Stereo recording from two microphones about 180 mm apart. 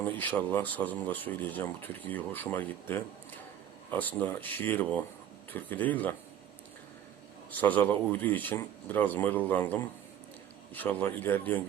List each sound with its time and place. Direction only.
0.0 s speech: 10° left (ahead or behind)
3.9 s speech: 10° left (ahead or behind)
7.6 s speech: 10° left (ahead or behind)